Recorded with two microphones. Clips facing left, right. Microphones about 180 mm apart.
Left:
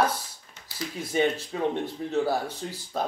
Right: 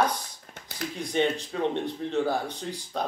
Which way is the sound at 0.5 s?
60° right (ahead or behind).